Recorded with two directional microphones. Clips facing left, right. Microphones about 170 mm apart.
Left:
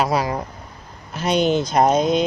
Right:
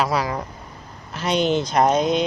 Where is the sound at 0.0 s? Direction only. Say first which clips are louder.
Left 2 dB; 40° left (ahead or behind).